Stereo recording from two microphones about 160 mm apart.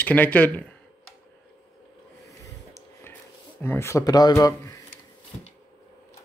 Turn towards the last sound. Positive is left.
turn(degrees=20)  # may be behind; listen again after turning